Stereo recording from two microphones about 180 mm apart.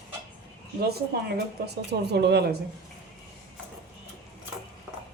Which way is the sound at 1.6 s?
70° right (ahead or behind).